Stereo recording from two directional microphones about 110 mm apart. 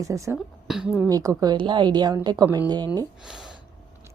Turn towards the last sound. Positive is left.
turn(degrees=-40)  # may be behind; listen again after turning